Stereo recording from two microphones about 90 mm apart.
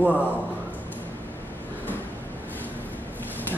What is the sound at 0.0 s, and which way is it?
Speech, 15° right (ahead or behind).